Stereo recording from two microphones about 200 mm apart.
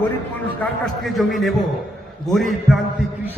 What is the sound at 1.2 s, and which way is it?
A man's voice, centre (ahead or behind).